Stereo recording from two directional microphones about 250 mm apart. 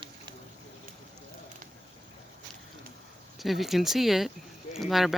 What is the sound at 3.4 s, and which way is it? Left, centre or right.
Speech, centre.